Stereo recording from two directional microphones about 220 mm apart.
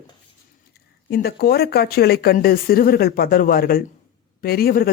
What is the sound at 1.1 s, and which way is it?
A man's voice, 45° left (ahead or behind).